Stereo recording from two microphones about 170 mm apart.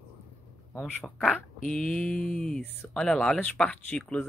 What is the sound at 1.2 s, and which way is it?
Speech, centre (ahead or behind).